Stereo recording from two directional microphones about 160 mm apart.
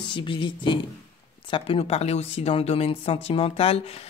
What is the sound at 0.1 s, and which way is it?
Speech, 30° left (ahead or behind).